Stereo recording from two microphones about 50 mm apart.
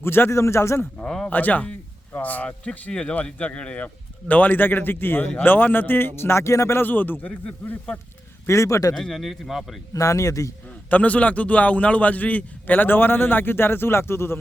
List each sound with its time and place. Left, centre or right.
0.0 s a man's voice: left
0.9 s speech: centre
1.3 s a man's voice: left
2.9 s a man's voice: centre; by 6.7 s left
6.7 s a man's voice: left
8.4 s speech: left
9.0 s speech: centre
9.2 s speech: centre
10.0 s a man's voice: left
10.8 s a man's voice: left